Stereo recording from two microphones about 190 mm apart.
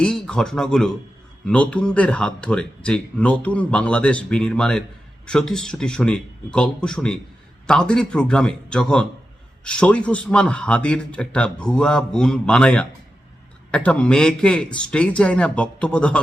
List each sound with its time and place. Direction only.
0.0 s speech: 5° left (ahead or behind)